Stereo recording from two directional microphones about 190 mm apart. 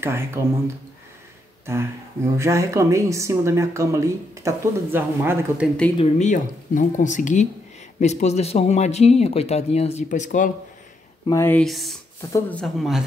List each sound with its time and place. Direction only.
0.0 s speech: 15° right (ahead or behind)
2.3 s speech: 15° right (ahead or behind)
5.9 s speech: 35° left (ahead or behind)
11.2 s speech: 15° left (ahead or behind)
11.6 s speech: centre (ahead or behind)
12.2 s speech: 15° left (ahead or behind)
12.5 s speech: centre (ahead or behind)